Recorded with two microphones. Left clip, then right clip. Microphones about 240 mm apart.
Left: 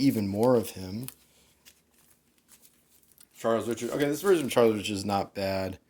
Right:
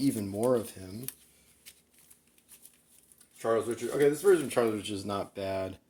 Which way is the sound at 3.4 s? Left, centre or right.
Left.